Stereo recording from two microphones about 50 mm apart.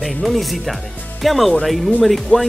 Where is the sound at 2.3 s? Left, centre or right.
Left.